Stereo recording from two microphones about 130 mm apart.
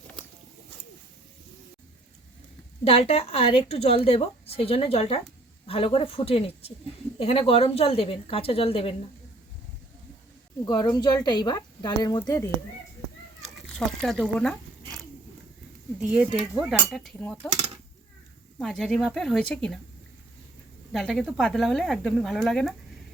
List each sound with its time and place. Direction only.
2.8 s a woman's voice: 50° left (ahead or behind)
10.7 s speech: 30° left (ahead or behind)
13.6 s speech: centre (ahead or behind)
16.6 s speech: 5° right (ahead or behind)
18.6 s speech: 5° left (ahead or behind)
20.9 s speech: 5° left (ahead or behind)